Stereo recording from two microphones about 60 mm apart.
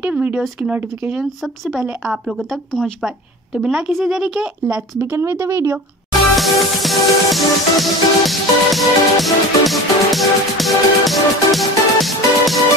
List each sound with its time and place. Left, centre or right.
0.0 s speech: right
1.2 s speech: centre
5.1 s speech: right
6.3 s music: centre